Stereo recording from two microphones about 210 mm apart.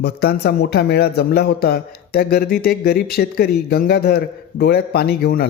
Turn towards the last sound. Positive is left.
turn(degrees=45)  # may be behind; listen again after turning